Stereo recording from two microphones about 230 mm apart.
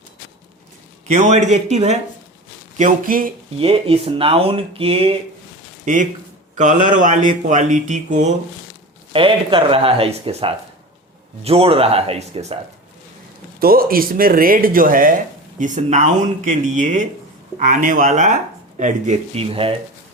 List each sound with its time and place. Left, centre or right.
1.0 s speech: right
3.6 s speech: right
13.6 s speech: right